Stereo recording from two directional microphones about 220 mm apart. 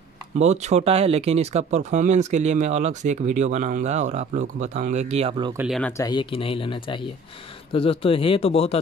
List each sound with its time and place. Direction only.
0.4 s speech: 30° right (ahead or behind)
5.6 s speech: centre (ahead or behind)
6.0 s speech: 20° left (ahead or behind)